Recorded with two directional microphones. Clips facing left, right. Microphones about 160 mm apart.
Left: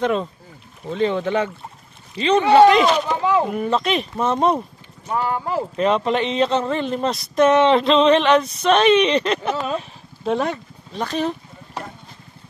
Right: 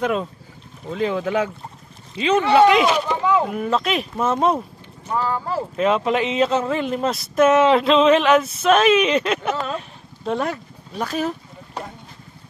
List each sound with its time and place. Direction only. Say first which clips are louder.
0.0 s speech: left 1 dB; 5° right (ahead or behind)
3.1 s a sound: even; 20° left (ahead or behind)
3.4 s speech: left 1 dB; centre (ahead or behind)
5.1 s speech: left 1 dB; 15° left (ahead or behind)
5.8 s speech: even; 5° right (ahead or behind)
9.7 s a sound: left 3 dB; centre (ahead or behind)